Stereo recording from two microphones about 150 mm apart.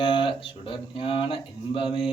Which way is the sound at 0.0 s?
35° left (ahead or behind).